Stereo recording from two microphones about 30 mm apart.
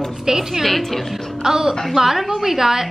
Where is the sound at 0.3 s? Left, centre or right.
Centre.